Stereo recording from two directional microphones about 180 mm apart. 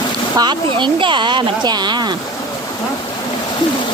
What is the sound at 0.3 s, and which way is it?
Speech, 25° right (ahead or behind).